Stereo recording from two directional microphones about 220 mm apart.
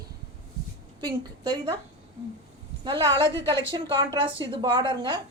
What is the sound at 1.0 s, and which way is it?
Speech, 20° right (ahead or behind).